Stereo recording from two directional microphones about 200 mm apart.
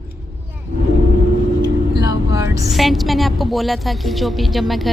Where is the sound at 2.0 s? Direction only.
20° right (ahead or behind).